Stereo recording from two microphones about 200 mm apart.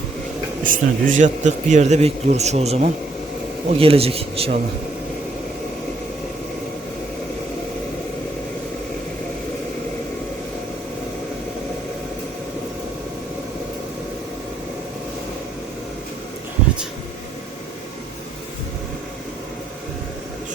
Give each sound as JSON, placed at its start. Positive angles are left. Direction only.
{"t": 0.6, "sound": "a man's voice", "side_deg": -40}